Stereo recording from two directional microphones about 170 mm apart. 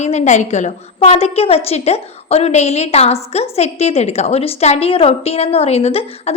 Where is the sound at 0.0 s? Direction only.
40° left (ahead or behind).